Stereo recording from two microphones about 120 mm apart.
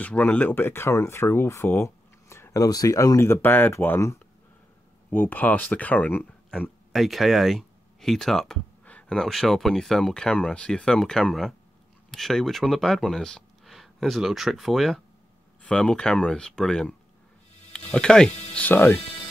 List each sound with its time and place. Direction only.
0.0 s speech: 10° left (ahead or behind)